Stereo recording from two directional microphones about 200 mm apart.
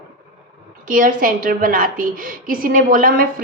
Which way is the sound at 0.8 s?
40° right (ahead or behind).